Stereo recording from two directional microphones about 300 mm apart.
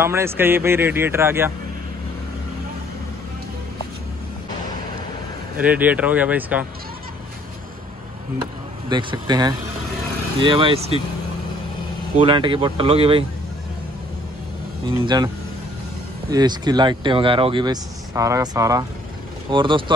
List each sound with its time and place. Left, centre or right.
0.0 s speech: centre
5.6 s speech: centre
8.8 s speech: centre
12.2 s speech: centre
14.9 s speech: centre